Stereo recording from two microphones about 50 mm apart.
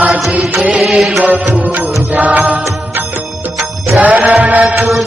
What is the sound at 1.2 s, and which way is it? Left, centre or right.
Music, right.